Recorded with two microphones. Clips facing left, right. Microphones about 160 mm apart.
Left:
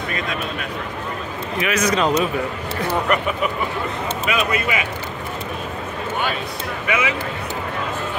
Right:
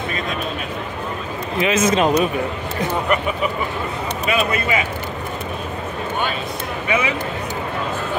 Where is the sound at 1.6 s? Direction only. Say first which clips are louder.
Right 3 dB; 25° right (ahead or behind).